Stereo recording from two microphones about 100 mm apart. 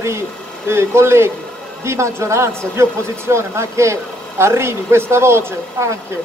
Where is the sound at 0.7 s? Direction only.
25° right (ahead or behind).